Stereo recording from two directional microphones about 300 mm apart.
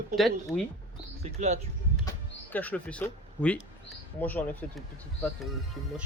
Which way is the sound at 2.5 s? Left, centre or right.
Centre.